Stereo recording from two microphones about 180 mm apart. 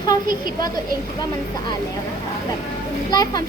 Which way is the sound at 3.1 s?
20° left (ahead or behind).